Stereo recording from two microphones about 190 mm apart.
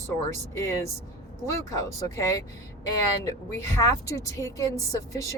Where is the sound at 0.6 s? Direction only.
15° left (ahead or behind).